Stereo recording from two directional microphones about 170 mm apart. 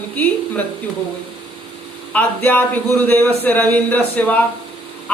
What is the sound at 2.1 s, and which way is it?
A man's voice, 10° left (ahead or behind).